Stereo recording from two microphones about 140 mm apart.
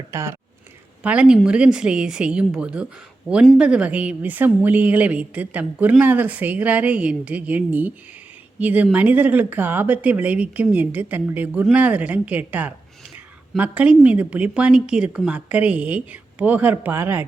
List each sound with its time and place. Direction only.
0.1 s speech: 20° right (ahead or behind)
1.0 s a woman's voice: 10° right (ahead or behind)